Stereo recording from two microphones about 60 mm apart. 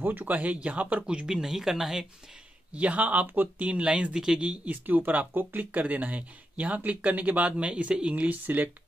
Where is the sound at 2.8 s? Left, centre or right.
Right.